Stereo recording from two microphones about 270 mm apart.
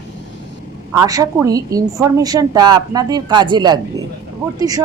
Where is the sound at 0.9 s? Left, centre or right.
Centre.